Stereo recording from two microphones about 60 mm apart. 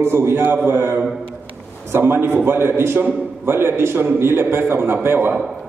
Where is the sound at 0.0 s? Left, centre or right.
Right.